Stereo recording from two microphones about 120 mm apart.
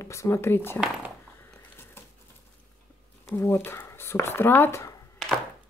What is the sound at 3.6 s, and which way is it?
Speech, 20° left (ahead or behind).